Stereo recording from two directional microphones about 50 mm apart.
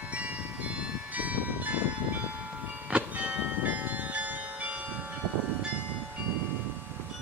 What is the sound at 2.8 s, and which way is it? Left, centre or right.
Music, right.